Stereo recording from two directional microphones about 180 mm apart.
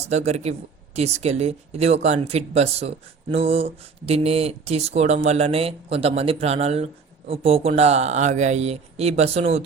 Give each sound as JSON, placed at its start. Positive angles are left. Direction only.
{"t": 0.0, "sound": "speech", "side_deg": -35}